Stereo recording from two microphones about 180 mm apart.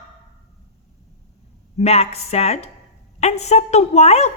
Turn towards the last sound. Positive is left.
turn(degrees=35)  # may be behind; listen again after turning